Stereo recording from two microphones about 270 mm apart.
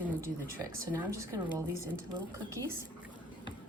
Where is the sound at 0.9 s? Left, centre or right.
Centre.